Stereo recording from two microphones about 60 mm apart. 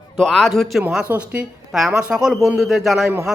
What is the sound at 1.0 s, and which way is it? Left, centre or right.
Speech, right.